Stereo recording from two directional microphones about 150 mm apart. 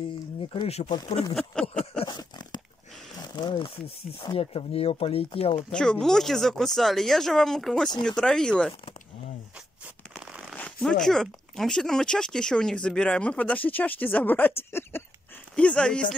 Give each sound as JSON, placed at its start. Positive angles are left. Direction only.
{"t": 0.5, "sound": "speech", "side_deg": 40}
{"t": 1.3, "sound": "speech", "side_deg": 5}
{"t": 2.0, "sound": "a sound", "side_deg": 30}
{"t": 3.3, "sound": "speech", "side_deg": 35}
{"t": 5.6, "sound": "speech", "side_deg": 5}
{"t": 10.5, "sound": "speech", "side_deg": 10}